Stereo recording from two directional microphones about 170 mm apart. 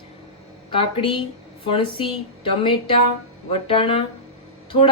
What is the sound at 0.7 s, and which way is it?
A woman's voice, 30° left (ahead or behind).